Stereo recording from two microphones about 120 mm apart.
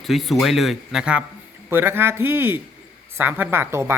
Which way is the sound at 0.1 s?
Centre (ahead or behind).